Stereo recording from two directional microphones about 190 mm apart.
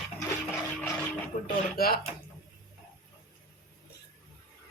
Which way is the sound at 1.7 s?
55° left (ahead or behind).